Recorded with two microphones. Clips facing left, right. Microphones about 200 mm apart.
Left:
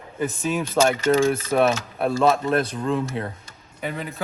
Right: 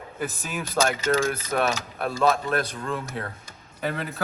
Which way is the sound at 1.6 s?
25° left (ahead or behind).